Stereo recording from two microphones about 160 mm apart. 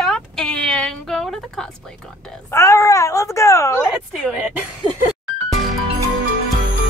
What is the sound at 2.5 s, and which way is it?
Speech, 20° left (ahead or behind).